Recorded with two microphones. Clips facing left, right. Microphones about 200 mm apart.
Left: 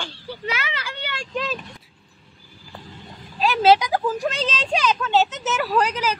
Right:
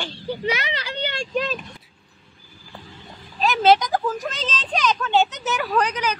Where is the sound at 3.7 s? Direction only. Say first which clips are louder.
Left 1 dB; 10° left (ahead or behind).